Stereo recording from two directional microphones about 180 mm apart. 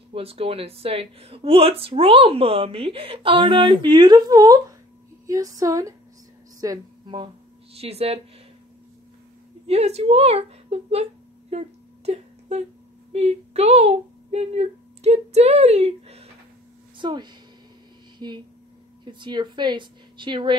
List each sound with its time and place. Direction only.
0.1 s a woman's voice: 30° right (ahead or behind)
7.7 s speech: 35° right (ahead or behind)
9.7 s speech: 35° right (ahead or behind)
12.1 s a sound: 35° right (ahead or behind)
13.1 s a woman's voice: 35° right (ahead or behind)